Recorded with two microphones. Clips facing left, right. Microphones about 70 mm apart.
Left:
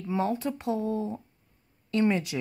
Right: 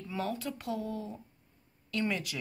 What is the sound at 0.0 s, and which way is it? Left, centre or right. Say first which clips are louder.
Speech: left 7 dB; left.